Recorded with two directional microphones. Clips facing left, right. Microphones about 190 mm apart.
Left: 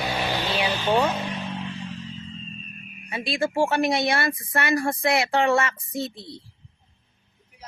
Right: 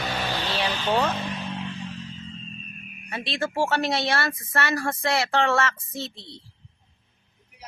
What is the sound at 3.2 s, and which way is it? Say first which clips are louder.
A woman's voice: left 3 dB; 10° left (ahead or behind).